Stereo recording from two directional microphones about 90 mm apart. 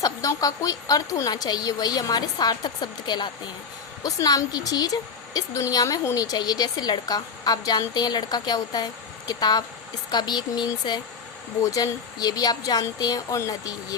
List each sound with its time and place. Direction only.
0.0 s speech: 40° left (ahead or behind)
4.0 s speech: 40° left (ahead or behind)
11.6 s speech: 40° left (ahead or behind)